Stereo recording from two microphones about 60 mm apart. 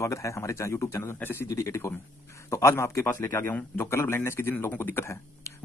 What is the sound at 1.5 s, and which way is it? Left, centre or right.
A man's voice, left.